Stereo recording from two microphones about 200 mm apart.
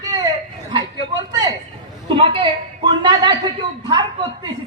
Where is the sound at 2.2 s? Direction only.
25° right (ahead or behind).